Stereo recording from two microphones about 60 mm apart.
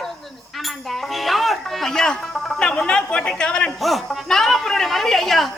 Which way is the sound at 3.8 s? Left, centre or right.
Centre.